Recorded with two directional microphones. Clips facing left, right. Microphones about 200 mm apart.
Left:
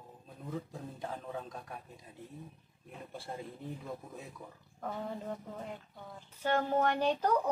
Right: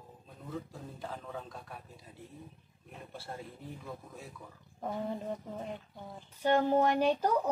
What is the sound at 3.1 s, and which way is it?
Speech, 15° left (ahead or behind).